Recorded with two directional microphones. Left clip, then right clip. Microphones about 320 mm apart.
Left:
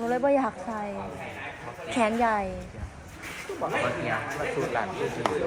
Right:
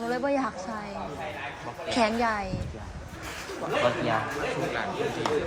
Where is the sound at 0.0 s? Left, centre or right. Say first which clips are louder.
Left 3 dB; centre.